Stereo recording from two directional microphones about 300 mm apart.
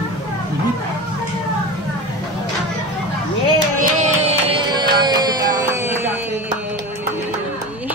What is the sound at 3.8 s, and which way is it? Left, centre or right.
Music, right.